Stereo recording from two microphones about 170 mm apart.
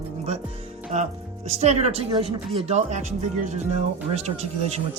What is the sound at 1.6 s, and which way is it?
Speech, 40° right (ahead or behind).